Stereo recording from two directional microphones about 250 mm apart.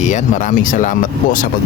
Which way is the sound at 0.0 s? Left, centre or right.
Left.